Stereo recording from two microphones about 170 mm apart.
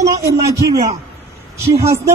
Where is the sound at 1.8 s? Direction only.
15° right (ahead or behind).